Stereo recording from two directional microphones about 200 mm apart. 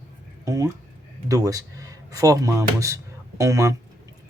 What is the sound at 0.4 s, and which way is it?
A man's voice, 15° right (ahead or behind).